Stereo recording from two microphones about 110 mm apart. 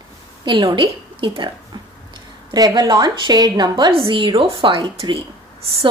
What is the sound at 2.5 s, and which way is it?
A woman's voice, 35° right (ahead or behind).